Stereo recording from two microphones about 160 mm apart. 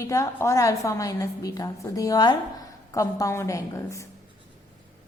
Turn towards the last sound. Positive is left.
turn(degrees=20)  # may be behind; listen again after turning